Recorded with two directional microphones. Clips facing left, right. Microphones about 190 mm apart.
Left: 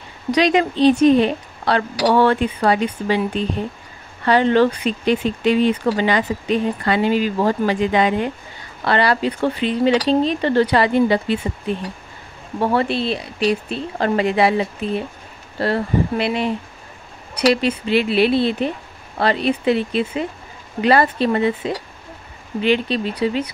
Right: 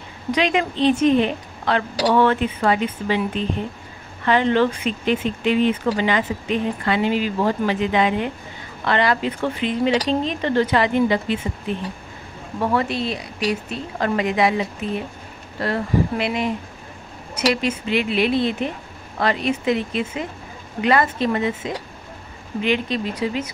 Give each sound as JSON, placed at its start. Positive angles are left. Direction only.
{"t": 0.4, "sound": "speech", "side_deg": 35}
{"t": 12.5, "sound": "speech", "side_deg": 30}
{"t": 17.6, "sound": "speech", "side_deg": 35}